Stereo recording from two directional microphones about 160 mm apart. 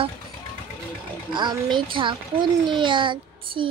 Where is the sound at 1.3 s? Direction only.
30° right (ahead or behind).